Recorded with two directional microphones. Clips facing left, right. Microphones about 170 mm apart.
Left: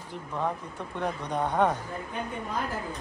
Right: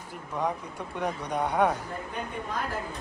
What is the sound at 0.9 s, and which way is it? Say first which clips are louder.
Speech: even; 10° right (ahead or behind).